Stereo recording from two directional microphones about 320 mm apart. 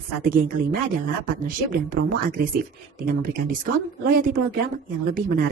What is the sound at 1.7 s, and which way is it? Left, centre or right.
Speech, right.